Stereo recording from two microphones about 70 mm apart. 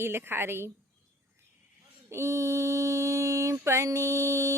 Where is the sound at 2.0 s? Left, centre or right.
Right.